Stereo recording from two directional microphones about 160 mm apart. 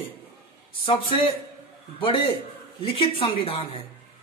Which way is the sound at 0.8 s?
35° left (ahead or behind).